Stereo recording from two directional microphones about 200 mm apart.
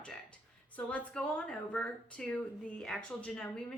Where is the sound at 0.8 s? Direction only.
5° left (ahead or behind).